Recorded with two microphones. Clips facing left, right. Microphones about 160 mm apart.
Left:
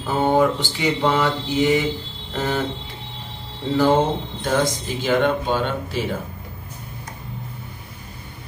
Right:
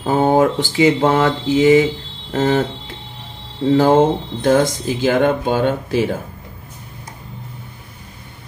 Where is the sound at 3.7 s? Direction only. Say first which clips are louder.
Right 4 dB; 45° right (ahead or behind).